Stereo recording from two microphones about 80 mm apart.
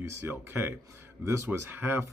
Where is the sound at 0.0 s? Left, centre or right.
Right.